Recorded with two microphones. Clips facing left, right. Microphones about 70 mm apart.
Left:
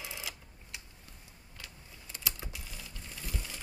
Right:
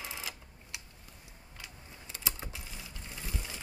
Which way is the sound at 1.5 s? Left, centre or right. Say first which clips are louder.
Right 1 dB; centre.